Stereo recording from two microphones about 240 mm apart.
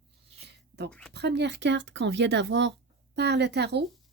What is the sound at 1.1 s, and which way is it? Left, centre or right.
Speech, right.